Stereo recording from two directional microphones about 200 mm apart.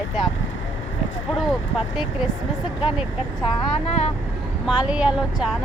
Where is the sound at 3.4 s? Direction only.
30° left (ahead or behind).